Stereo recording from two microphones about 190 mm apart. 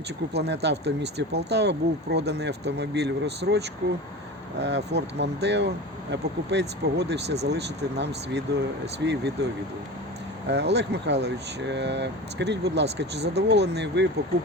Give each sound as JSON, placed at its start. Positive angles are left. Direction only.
{"t": 0.3, "sound": "speech", "side_deg": -60}
{"t": 10.5, "sound": "speech", "side_deg": -65}